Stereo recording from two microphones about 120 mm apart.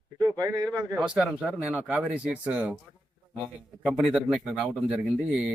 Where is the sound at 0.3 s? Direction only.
30° right (ahead or behind).